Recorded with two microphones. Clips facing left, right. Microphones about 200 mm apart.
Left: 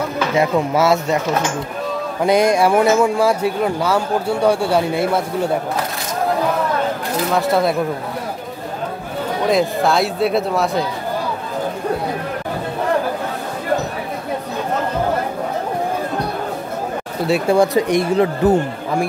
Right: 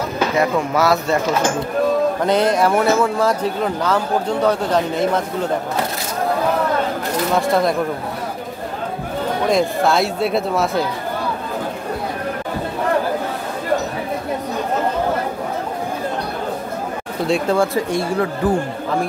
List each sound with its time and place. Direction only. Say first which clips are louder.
0.4 s speech: left 2 dB; 25° left (ahead or behind)
2.2 s speech: left 5 dB; 10° left (ahead or behind)
7.3 s speech: left 1 dB; 5° left (ahead or behind)
9.5 s speech: left 1 dB; centre (ahead or behind)
17.3 s speech: left 3 dB; 15° left (ahead or behind)